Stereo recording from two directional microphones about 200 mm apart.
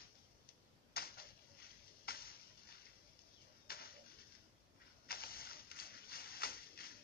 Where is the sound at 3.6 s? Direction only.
50° left (ahead or behind).